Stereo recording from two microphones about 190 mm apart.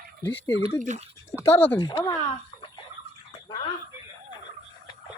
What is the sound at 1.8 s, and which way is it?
Speech, 25° left (ahead or behind).